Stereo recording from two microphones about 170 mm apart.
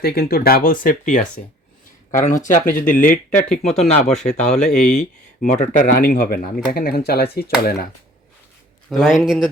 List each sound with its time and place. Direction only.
0.0 s speech: 60° left (ahead or behind)
2.9 s speech: 10° left (ahead or behind)
3.3 s speech: 40° left (ahead or behind)
4.4 s speech: 5° left (ahead or behind)
4.9 s speech: 45° left (ahead or behind); by 7.9 s 65° left (ahead or behind)
8.9 s speech: centre (ahead or behind)